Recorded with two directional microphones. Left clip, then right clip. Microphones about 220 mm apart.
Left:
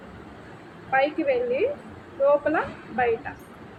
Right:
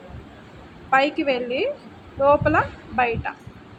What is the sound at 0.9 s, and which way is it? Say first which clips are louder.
A woman's voice: right 3 dB; 30° right (ahead or behind).